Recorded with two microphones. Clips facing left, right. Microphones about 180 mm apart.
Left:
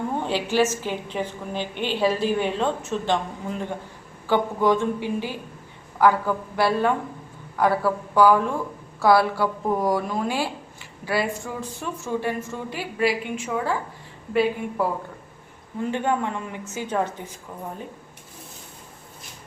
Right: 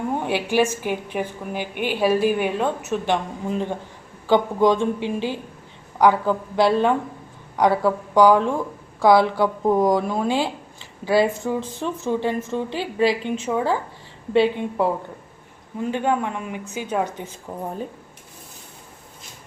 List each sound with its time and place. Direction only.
0.2 s a woman's voice: 15° right (ahead or behind)
15.9 s a woman's voice: 15° right (ahead or behind)
17.5 s speech: 40° right (ahead or behind)